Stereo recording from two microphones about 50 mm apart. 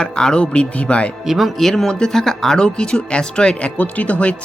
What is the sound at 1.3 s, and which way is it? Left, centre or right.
Speech, centre.